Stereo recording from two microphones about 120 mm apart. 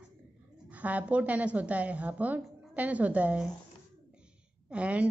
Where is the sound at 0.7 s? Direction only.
10° right (ahead or behind).